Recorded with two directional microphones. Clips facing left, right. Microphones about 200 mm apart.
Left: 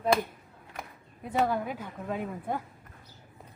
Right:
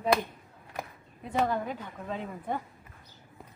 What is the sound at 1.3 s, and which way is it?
A woman's voice, 5° left (ahead or behind).